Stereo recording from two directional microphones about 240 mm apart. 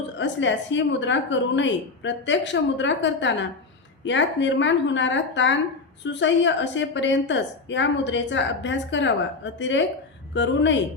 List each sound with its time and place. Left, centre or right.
0.2 s a woman's voice: left